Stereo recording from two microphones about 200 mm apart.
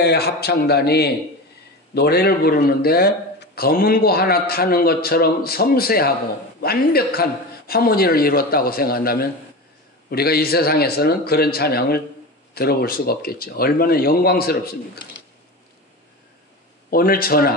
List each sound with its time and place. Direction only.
0.0 s a man's voice: 55° left (ahead or behind)
16.9 s a man's voice: 45° left (ahead or behind)